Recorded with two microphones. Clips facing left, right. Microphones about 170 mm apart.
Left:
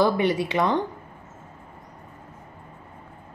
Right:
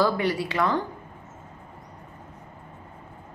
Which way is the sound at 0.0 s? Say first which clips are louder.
Left 3 dB; 20° left (ahead or behind).